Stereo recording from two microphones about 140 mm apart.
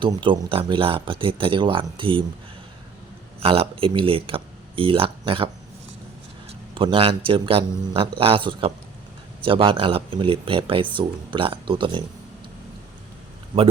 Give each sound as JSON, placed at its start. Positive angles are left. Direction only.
{"t": 0.0, "sound": "speech", "side_deg": -35}
{"t": 3.4, "sound": "speech", "side_deg": -45}
{"t": 6.7, "sound": "speech", "side_deg": -40}